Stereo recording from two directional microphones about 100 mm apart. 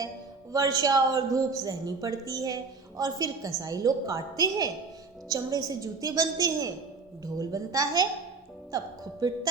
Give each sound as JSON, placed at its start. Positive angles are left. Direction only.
{"t": 0.5, "sound": "speech", "side_deg": -40}
{"t": 9.2, "sound": "speech", "side_deg": -40}